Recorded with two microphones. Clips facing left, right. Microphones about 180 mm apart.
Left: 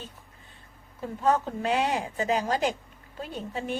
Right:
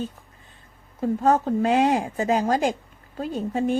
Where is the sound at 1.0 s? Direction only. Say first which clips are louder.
Right 5 dB; 45° right (ahead or behind).